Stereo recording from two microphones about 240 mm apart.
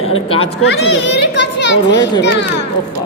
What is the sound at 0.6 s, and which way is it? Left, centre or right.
Children playing, left.